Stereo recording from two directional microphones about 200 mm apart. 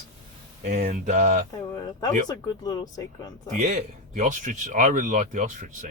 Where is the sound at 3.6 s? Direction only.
35° right (ahead or behind).